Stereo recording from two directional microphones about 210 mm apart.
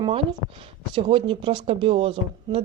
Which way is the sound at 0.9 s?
25° right (ahead or behind).